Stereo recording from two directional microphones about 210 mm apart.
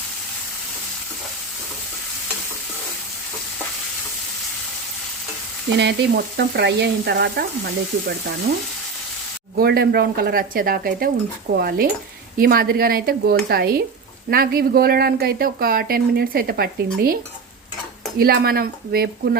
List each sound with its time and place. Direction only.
5.7 s frying: 55° right (ahead or behind)
6.3 s speech: 50° right (ahead or behind)
9.6 s speech: 50° right (ahead or behind)
18.2 s speech: 45° right (ahead or behind)